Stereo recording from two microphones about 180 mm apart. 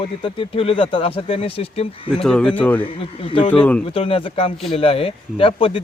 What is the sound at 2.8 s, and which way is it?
Speech, 30° left (ahead or behind).